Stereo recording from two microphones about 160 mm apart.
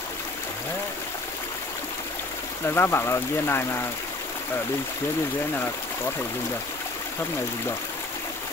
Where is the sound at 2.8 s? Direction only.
15° left (ahead or behind).